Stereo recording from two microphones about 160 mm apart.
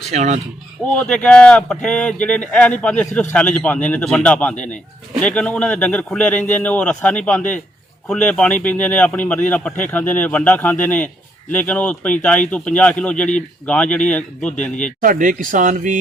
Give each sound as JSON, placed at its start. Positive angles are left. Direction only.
{"t": 0.1, "sound": "speech", "side_deg": -45}
{"t": 0.9, "sound": "speech", "side_deg": 5}
{"t": 15.0, "sound": "speech", "side_deg": -55}